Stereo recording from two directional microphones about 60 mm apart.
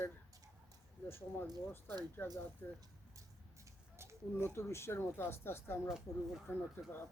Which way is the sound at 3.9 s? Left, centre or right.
Right.